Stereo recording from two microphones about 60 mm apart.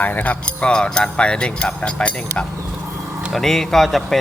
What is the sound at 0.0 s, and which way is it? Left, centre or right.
Speech, left.